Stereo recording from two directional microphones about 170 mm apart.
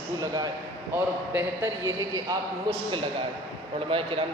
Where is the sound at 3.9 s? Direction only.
35° right (ahead or behind).